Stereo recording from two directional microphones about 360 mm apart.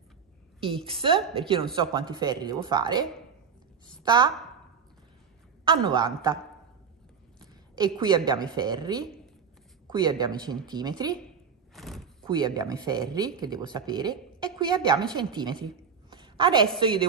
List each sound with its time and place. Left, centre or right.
0.6 s a woman's voice: centre
5.7 s speech: centre
7.7 s speech: centre
11.7 s door: centre
12.3 s speech: centre
16.1 s a sound: centre